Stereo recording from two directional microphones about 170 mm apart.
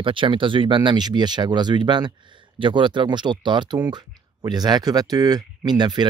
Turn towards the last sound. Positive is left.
turn(degrees=-25)  # may be behind; listen again after turning